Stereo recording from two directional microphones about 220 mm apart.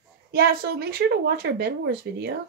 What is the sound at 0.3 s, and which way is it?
Speech, 45° right (ahead or behind).